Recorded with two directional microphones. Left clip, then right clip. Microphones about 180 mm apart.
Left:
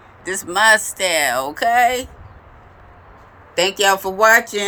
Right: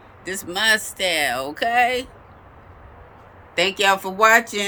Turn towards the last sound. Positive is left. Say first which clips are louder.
# left 2 dB
turn(degrees=-25)  # may be behind; listen again after turning